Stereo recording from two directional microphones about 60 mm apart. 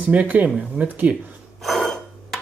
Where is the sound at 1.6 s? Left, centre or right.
Centre.